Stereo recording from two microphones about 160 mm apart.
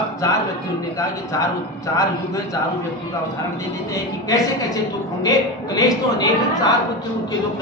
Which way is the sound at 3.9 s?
20° left (ahead or behind).